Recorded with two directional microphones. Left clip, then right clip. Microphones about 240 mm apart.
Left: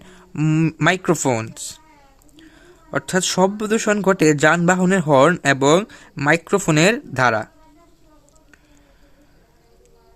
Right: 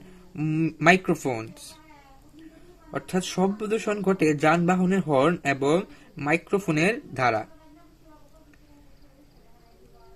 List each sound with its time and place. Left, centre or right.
0.3 s speech: left
2.9 s speech: left